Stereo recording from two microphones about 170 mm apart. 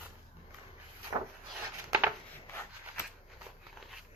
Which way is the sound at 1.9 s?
10° right (ahead or behind).